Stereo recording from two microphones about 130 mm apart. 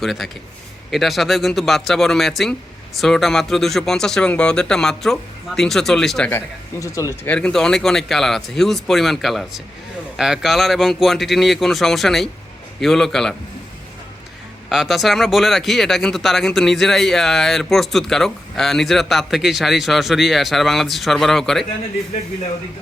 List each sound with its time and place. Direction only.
0.0 s speech: centre (ahead or behind)
6.3 s speech: 25° left (ahead or behind)
7.3 s speech: 5° left (ahead or behind)
14.7 s speech: centre (ahead or behind)